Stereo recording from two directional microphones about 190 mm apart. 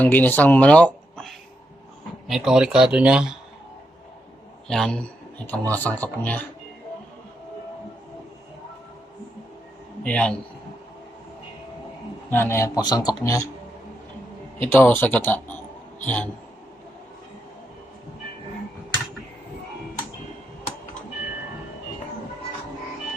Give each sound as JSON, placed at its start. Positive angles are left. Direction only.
{"t": 0.0, "sound": "speech", "side_deg": 10}
{"t": 4.7, "sound": "speech", "side_deg": 5}
{"t": 10.0, "sound": "speech", "side_deg": 5}
{"t": 12.3, "sound": "speech", "side_deg": 10}
{"t": 14.6, "sound": "speech", "side_deg": 10}